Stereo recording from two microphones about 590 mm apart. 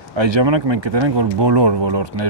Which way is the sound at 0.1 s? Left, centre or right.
Right.